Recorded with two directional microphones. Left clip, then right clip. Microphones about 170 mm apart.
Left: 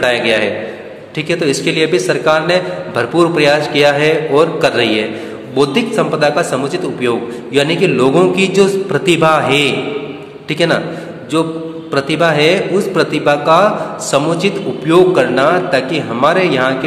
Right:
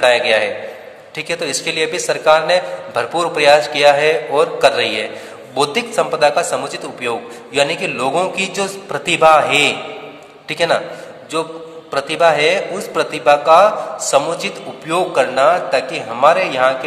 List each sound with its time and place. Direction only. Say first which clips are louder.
0.0 s a man's voice: even; 30° right (ahead or behind)